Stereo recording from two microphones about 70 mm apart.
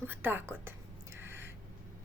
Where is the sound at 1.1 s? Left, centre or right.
Right.